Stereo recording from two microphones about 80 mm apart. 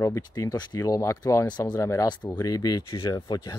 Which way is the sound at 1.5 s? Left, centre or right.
Left.